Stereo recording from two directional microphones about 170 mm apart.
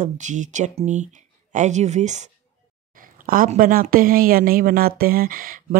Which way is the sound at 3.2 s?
55° right (ahead or behind).